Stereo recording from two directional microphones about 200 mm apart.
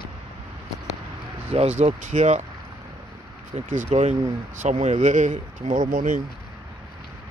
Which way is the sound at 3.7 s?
35° right (ahead or behind).